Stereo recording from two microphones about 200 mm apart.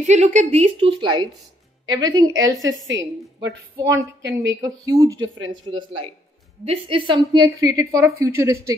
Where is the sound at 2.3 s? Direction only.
70° right (ahead or behind).